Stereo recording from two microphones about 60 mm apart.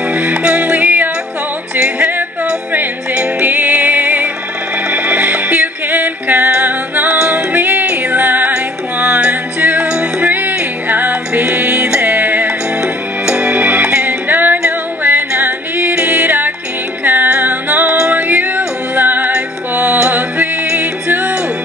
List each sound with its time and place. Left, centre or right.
0.1 s music: right
3.4 s music: right
7.2 s music: centre
7.5 s music: right